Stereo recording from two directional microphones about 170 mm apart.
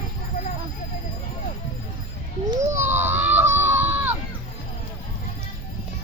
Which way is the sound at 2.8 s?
15° right (ahead or behind).